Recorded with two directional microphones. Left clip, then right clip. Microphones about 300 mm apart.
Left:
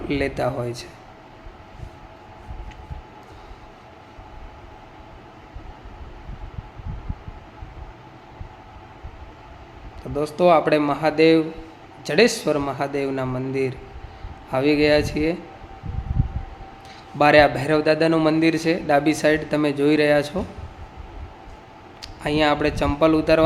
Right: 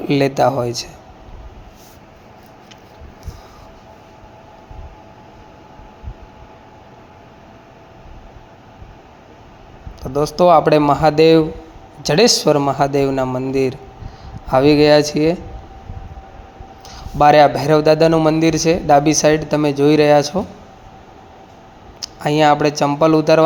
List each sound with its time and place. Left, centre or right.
0.1 s a man's voice: centre
10.3 s a man's voice: centre
16.9 s a man's voice: centre
22.2 s a man's voice: centre